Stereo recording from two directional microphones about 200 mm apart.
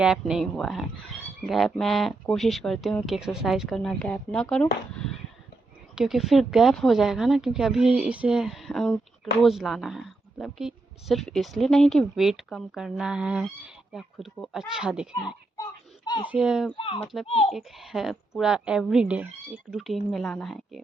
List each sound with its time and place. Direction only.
0.0 s speech: 5° right (ahead or behind)
6.0 s speech: centre (ahead or behind)
15.1 s a sound: 15° left (ahead or behind)
16.3 s speech: 5° right (ahead or behind)
16.7 s a child's voice: 25° left (ahead or behind)
17.5 s speech: centre (ahead or behind)